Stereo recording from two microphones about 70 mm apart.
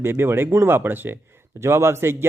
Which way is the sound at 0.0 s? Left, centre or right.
Right.